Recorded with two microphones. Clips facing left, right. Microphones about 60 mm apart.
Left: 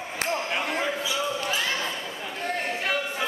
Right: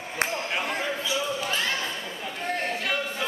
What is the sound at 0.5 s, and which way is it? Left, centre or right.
Basketball bounce, centre.